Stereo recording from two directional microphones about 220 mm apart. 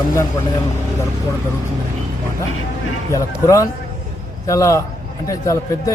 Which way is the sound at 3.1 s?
15° left (ahead or behind).